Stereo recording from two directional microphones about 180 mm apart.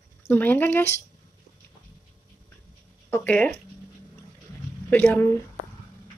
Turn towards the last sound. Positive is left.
turn(degrees=10)  # may be behind; listen again after turning